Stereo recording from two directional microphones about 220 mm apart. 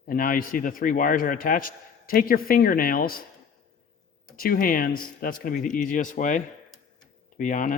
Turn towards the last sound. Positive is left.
turn(degrees=35)  # may be behind; listen again after turning